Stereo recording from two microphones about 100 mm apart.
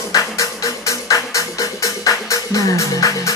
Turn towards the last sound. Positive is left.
turn(degrees=30)  # may be behind; listen again after turning